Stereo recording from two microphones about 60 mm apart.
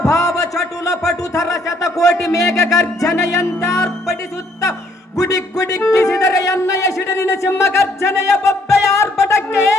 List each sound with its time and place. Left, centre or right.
0.0 s a sound: left
0.9 s speech: left
2.7 s music: left
5.1 s music: left
7.1 s speech: left
9.0 s a sound: left